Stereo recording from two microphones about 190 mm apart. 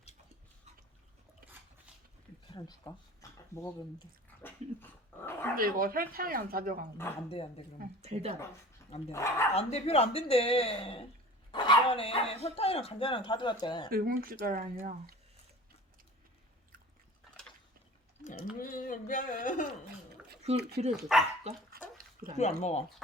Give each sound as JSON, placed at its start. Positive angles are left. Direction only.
{"t": 2.5, "sound": "a sound", "side_deg": 20}
{"t": 4.4, "sound": "dog", "side_deg": 10}
{"t": 5.5, "sound": "speech", "side_deg": -50}
{"t": 8.0, "sound": "speech", "side_deg": -35}
{"t": 9.1, "sound": "speech", "side_deg": 15}
{"t": 9.6, "sound": "speech", "side_deg": 35}
{"t": 13.9, "sound": "speech", "side_deg": -50}
{"t": 18.6, "sound": "speech", "side_deg": 45}
{"t": 20.6, "sound": "speech", "side_deg": -60}
{"t": 21.1, "sound": "speech", "side_deg": -5}
{"t": 21.5, "sound": "speech", "side_deg": -35}
{"t": 22.4, "sound": "speech", "side_deg": 35}